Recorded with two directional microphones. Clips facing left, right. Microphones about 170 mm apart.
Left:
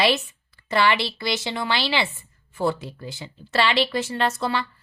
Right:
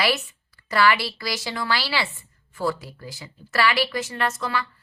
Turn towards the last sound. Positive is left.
turn(degrees=30)  # may be behind; listen again after turning